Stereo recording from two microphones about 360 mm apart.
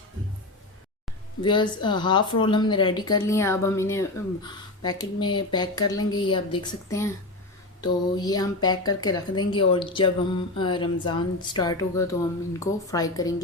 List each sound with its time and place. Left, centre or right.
1.4 s speech: centre